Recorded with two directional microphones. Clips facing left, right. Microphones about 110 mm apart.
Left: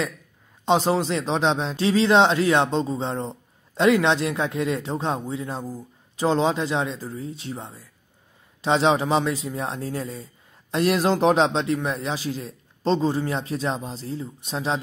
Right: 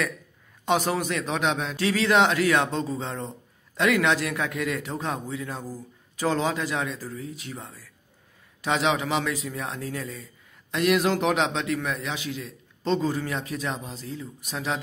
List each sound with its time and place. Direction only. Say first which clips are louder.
0.7 s a man's voice: left 4 dB; 25° left (ahead or behind)